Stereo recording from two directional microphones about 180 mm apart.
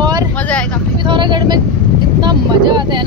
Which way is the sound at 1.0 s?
25° right (ahead or behind).